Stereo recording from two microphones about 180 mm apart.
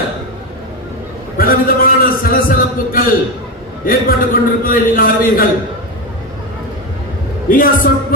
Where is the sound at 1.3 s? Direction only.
55° left (ahead or behind).